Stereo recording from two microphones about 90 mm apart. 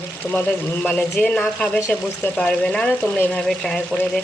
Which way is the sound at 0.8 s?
15° left (ahead or behind).